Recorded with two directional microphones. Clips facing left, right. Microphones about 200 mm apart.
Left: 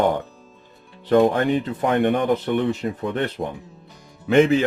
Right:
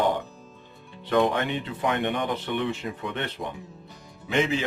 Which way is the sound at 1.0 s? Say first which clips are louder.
Left 6 dB; 35° left (ahead or behind).